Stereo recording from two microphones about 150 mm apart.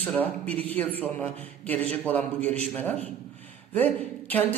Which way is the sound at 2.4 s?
45° right (ahead or behind).